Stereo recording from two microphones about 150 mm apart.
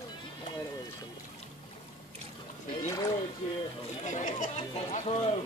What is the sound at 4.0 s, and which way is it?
Chatter, 55° left (ahead or behind).